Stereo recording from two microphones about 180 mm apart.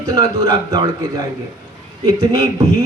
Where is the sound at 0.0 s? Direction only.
20° right (ahead or behind).